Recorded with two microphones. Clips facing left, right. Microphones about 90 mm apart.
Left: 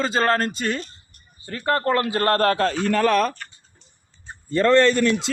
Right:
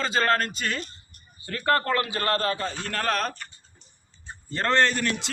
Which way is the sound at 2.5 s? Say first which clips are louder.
Left 8 dB; 85° left.